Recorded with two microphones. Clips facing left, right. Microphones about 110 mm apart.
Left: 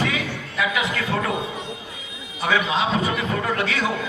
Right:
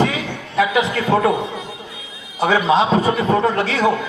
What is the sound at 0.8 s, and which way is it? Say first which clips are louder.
Speech: right 7 dB; 30° right (ahead or behind).